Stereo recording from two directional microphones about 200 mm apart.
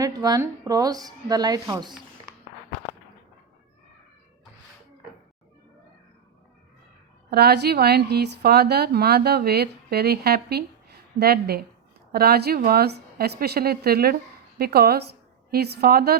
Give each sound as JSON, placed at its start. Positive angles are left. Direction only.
{"t": 0.0, "sound": "speech", "side_deg": -20}
{"t": 7.3, "sound": "a woman's voice", "side_deg": -55}